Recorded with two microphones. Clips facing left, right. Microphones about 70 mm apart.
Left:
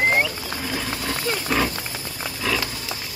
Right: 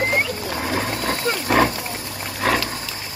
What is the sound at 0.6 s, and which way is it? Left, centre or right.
Roaring cats, right.